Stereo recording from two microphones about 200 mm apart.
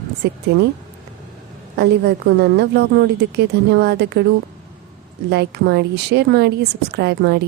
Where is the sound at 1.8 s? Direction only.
55° right (ahead or behind).